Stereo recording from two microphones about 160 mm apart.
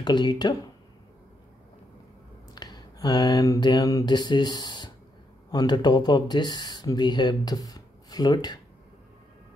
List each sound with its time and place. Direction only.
0.0 s speech: 25° left (ahead or behind)
2.5 s a sound: 25° left (ahead or behind)
5.5 s speech: 25° left (ahead or behind)